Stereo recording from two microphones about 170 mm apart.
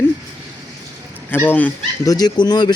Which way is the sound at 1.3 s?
10° left (ahead or behind).